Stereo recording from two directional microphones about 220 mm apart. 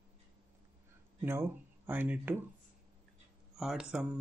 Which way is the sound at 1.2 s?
10° right (ahead or behind).